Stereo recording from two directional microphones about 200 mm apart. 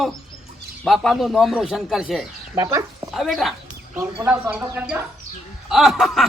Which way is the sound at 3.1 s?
Centre (ahead or behind).